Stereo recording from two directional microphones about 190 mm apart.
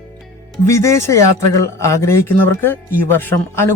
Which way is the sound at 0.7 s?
15° left (ahead or behind).